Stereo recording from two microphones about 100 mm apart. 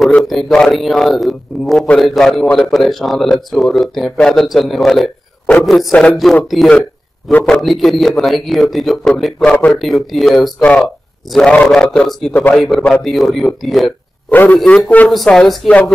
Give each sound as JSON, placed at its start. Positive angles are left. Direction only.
{"t": 0.3, "sound": "speech", "side_deg": 5}
{"t": 9.2, "sound": "a man's voice", "side_deg": 10}
{"t": 9.8, "sound": "speech", "side_deg": 0}
{"t": 10.6, "sound": "a man's voice", "side_deg": 10}
{"t": 14.3, "sound": "a man's voice", "side_deg": 20}
{"t": 14.6, "sound": "a man's voice", "side_deg": 10}